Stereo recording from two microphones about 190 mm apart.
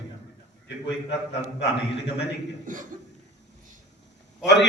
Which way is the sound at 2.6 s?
45° right (ahead or behind).